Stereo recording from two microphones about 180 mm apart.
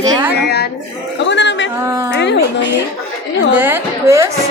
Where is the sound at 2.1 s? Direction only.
75° left (ahead or behind).